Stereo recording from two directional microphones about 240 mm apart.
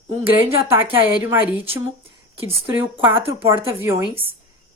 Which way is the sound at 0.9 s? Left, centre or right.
Centre.